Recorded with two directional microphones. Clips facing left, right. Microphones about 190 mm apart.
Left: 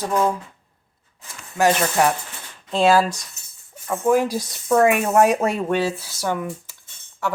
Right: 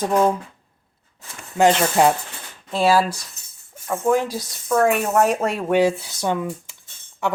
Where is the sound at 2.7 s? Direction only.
10° right (ahead or behind).